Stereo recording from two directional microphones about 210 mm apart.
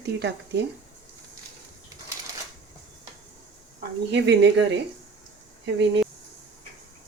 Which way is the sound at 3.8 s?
55° right (ahead or behind).